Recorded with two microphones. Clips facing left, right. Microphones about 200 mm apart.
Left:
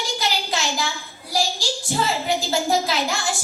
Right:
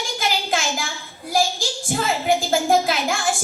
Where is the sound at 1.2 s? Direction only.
50° right (ahead or behind).